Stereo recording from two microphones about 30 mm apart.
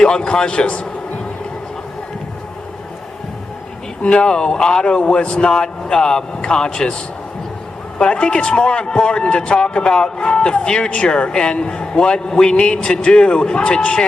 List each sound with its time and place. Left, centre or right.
0.0 s speech: left
4.0 s speech: left
7.9 s a man's voice: left
11.1 s a man's voice: left